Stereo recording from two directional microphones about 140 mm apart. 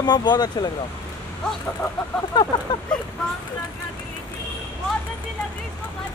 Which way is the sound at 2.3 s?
30° left (ahead or behind).